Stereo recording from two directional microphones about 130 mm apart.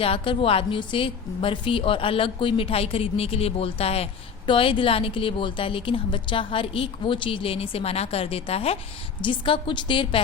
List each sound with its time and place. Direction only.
0.0 s a woman's voice: 45° left (ahead or behind)
9.2 s a woman's voice: 40° left (ahead or behind)